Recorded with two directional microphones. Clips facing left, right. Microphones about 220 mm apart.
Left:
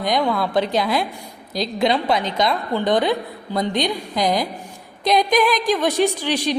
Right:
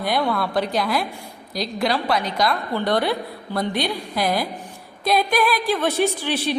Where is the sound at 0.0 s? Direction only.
15° left (ahead or behind).